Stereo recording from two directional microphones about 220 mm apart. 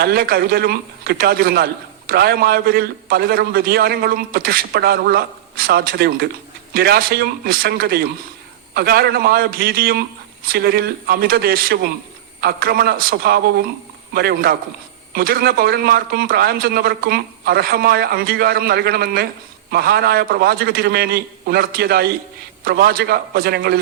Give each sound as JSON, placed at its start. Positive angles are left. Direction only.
{"t": 0.0, "sound": "a man's voice", "side_deg": -45}